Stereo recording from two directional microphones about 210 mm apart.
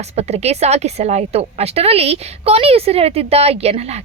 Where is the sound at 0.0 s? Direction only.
30° right (ahead or behind).